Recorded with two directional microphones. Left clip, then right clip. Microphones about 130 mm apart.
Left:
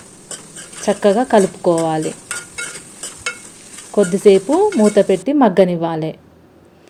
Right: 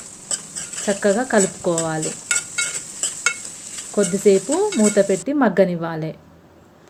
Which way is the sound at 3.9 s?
25° left (ahead or behind).